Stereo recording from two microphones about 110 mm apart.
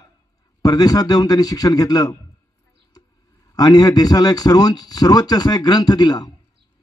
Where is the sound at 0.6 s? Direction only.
35° left (ahead or behind).